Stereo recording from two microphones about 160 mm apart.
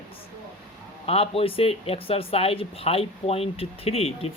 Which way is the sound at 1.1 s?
35° left (ahead or behind).